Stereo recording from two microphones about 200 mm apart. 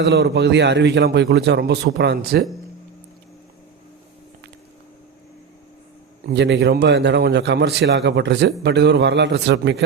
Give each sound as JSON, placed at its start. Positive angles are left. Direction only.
{"t": 0.0, "sound": "a man's voice", "side_deg": -55}
{"t": 6.3, "sound": "a man's voice", "side_deg": -60}